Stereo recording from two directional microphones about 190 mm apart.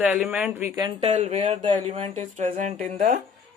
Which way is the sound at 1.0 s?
35° right (ahead or behind).